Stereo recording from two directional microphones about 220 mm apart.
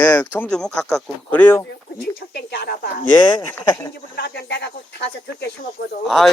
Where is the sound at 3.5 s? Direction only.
10° left (ahead or behind).